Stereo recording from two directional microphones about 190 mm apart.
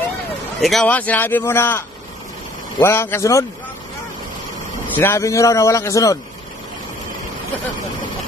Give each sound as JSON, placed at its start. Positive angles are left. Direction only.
{"t": 0.6, "sound": "speech", "side_deg": 0}
{"t": 4.9, "sound": "speech", "side_deg": 15}